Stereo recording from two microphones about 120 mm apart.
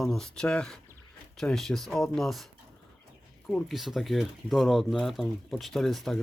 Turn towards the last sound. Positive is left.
turn(degrees=0)  # may be behind; listen again after turning